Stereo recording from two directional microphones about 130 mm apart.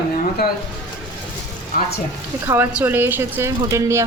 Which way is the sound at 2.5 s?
15° right (ahead or behind).